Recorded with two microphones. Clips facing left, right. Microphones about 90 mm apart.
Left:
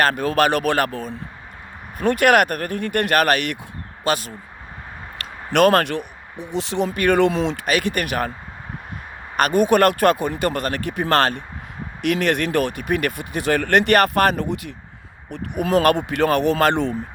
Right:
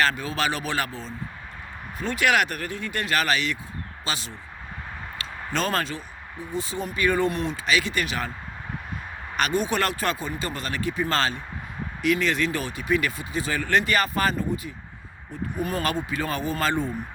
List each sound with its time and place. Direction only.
0.0 s speech: 50° left (ahead or behind)
5.5 s speech: 65° left (ahead or behind); by 7.6 s 90° left
7.6 s speech: 55° left (ahead or behind)
9.3 s speech: 50° left (ahead or behind); by 16.9 s 70° left (ahead or behind)